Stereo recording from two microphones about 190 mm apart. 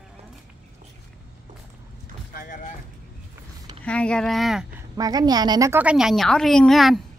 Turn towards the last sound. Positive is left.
turn(degrees=0)  # may be behind; listen again after turning